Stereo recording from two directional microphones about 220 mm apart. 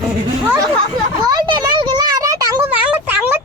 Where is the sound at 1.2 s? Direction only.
20° right (ahead or behind).